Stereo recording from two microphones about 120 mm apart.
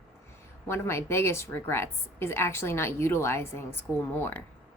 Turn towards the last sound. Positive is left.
turn(degrees=20)  # may be behind; listen again after turning